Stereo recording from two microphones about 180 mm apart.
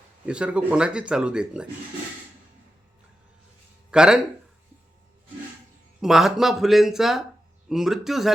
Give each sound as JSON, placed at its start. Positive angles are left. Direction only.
{"t": 0.3, "sound": "speech", "side_deg": -5}
{"t": 3.9, "sound": "speech", "side_deg": -5}
{"t": 6.0, "sound": "speech", "side_deg": 0}